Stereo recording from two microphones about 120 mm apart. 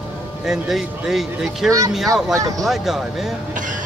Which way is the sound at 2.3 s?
30° right (ahead or behind).